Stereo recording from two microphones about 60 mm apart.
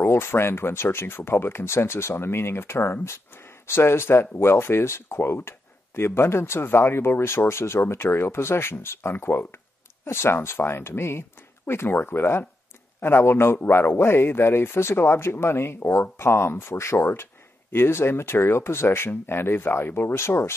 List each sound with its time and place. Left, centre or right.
0.0 s speech: left